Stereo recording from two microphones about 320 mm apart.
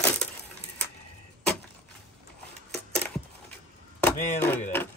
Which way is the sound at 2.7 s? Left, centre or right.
Centre.